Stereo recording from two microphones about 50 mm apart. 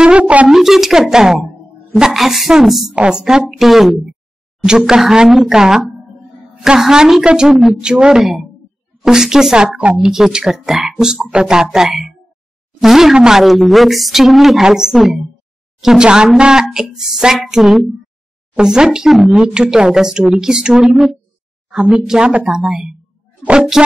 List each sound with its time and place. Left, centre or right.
0.0 s a sound: right
0.5 s a woman's voice: centre
3.0 s speech: centre
6.8 s speech: centre
9.0 s speech: centre
13.4 s a woman's voice: centre
15.8 s a woman's voice: centre
18.6 s speech: centre
19.0 s a woman's voice: centre
19.5 s speech: centre
21.6 s a sound: centre
22.0 s speech: centre